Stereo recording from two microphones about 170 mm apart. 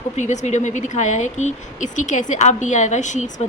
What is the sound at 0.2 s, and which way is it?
A woman's voice, 45° left (ahead or behind).